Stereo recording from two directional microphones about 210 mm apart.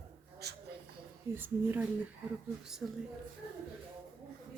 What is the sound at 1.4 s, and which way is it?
Speech, 10° right (ahead or behind).